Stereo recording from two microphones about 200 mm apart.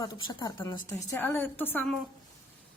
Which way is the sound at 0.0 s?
20° left (ahead or behind).